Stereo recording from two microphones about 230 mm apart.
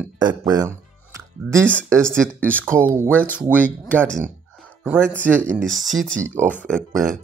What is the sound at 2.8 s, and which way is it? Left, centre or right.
Speech, centre.